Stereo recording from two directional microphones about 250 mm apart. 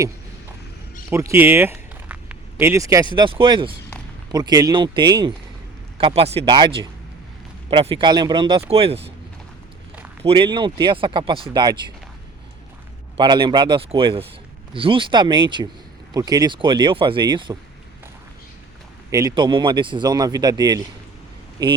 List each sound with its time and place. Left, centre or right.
1.1 s a sound: centre
3.2 s speech: centre
10.2 s speech: centre
13.1 s speech: centre
19.1 s speech: centre